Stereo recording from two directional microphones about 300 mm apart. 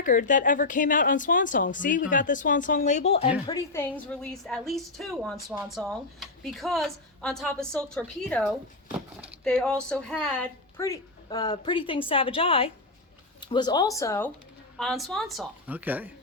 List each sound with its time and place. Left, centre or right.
0.0 s a woman's voice: left
3.4 s a woman's voice: centre